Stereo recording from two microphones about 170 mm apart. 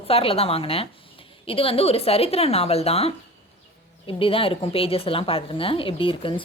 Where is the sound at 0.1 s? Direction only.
35° left (ahead or behind).